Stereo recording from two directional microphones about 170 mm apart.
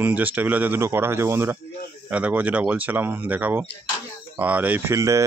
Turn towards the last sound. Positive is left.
turn(degrees=-20)  # may be behind; listen again after turning